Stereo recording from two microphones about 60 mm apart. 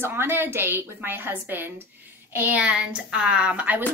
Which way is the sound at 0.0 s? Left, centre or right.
Right.